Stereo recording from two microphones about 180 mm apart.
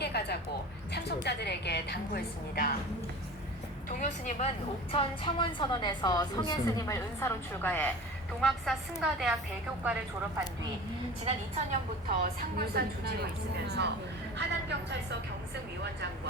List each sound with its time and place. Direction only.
0.0 s music: 65° left (ahead or behind)
0.9 s a woman's voice: 70° left (ahead or behind)
3.8 s a woman's voice: 45° left (ahead or behind)
4.9 s a woman's voice: 30° left (ahead or behind); by 10.4 s 5° right (ahead or behind)
11.7 s a woman's voice: 50° right (ahead or behind); by 13.9 s 70° right (ahead or behind)